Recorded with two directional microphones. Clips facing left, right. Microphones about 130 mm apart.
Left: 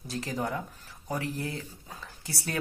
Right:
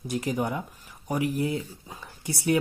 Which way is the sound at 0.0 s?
20° right (ahead or behind).